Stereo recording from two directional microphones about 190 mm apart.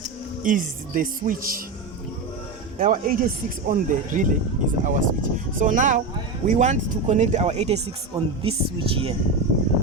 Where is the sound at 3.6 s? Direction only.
45° right (ahead or behind).